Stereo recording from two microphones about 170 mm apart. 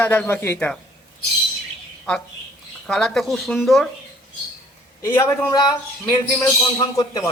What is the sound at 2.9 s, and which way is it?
Speech, centre (ahead or behind).